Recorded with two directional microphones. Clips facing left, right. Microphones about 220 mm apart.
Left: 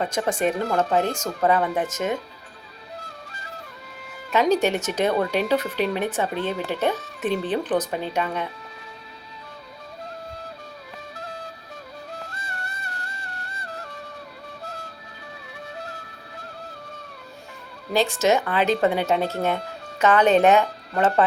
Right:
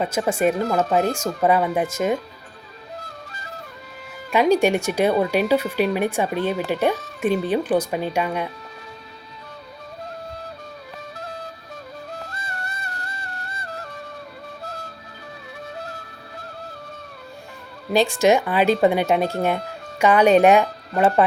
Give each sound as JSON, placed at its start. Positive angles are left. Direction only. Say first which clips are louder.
{"t": 0.0, "sound": "speech", "louder": "right 3 dB", "side_deg": -5}
{"t": 4.3, "sound": "speech", "louder": "right 3 dB", "side_deg": -10}
{"t": 12.3, "sound": "music", "louder": "right 3 dB", "side_deg": -40}
{"t": 17.9, "sound": "speech", "louder": "right 3 dB", "side_deg": -15}